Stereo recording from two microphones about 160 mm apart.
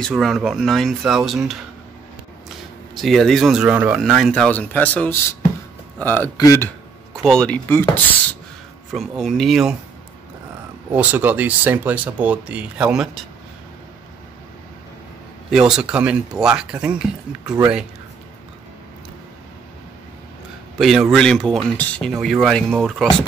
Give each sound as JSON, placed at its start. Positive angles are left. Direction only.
{"t": 0.0, "sound": "speech", "side_deg": 0}
{"t": 3.0, "sound": "speech", "side_deg": 0}
{"t": 7.2, "sound": "speech", "side_deg": 5}
{"t": 8.9, "sound": "speech", "side_deg": 0}
{"t": 10.9, "sound": "speech", "side_deg": -10}
{"t": 15.5, "sound": "speech", "side_deg": -5}
{"t": 20.8, "sound": "speech", "side_deg": 0}